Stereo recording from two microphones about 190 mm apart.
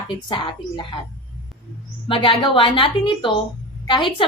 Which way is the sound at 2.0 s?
25° left (ahead or behind).